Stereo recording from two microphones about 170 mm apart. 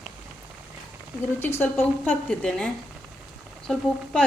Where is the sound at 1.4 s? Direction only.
15° left (ahead or behind).